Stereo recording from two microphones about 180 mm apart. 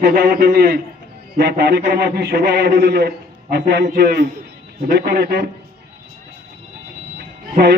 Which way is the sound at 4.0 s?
60° right (ahead or behind).